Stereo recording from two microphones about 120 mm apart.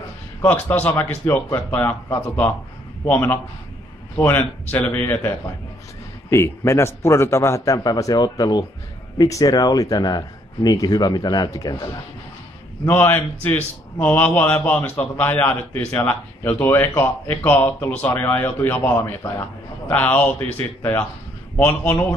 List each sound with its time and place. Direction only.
0.4 s a man's voice: 15° left (ahead or behind)
6.3 s a man's voice: 25° left (ahead or behind)
12.8 s a man's voice: 15° left (ahead or behind)